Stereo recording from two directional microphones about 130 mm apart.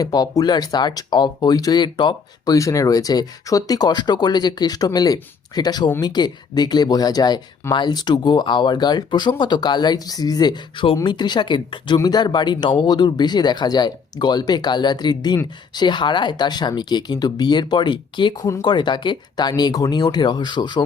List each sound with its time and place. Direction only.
0.0 s speech: 30° left (ahead or behind)
2.6 s speech: 25° left (ahead or behind)
18.3 s speech: 25° left (ahead or behind)
18.7 s speech: 35° left (ahead or behind)